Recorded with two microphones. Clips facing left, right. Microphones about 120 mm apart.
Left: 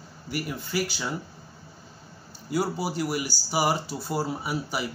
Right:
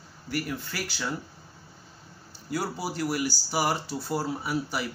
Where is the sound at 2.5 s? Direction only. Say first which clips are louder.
Left 4 dB; 10° left (ahead or behind).